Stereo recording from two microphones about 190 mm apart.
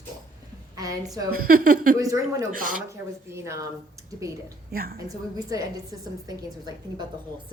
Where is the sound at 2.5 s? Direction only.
45° right (ahead or behind).